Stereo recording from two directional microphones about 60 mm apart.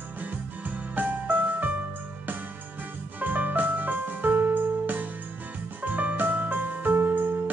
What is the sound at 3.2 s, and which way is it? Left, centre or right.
Music, right.